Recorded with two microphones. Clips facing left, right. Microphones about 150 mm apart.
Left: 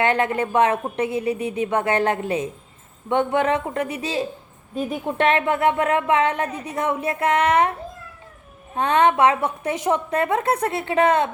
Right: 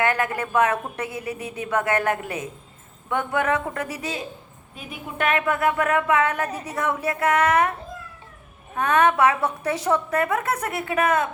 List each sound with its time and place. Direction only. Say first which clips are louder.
0.0 s a woman's voice: left 3 dB; 25° left (ahead or behind)
8.7 s a woman's voice: left 2 dB; 25° left (ahead or behind)